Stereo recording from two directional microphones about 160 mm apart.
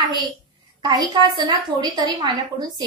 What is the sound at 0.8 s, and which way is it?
A woman's voice, 25° right (ahead or behind).